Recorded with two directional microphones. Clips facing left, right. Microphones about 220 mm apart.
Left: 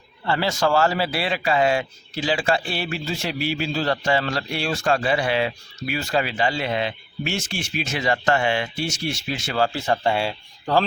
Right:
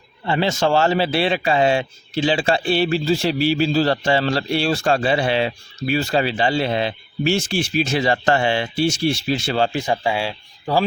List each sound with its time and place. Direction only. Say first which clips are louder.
0.3 s a man's voice: right 3 dB; 20° right (ahead or behind)
10.0 s speech: even; centre (ahead or behind)